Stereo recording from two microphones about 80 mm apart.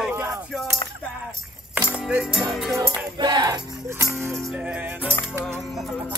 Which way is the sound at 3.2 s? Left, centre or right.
Right.